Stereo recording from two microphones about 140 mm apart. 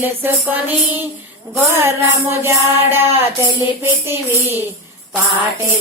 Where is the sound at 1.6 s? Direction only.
15° right (ahead or behind).